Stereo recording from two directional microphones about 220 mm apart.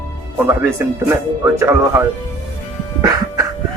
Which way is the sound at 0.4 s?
10° right (ahead or behind).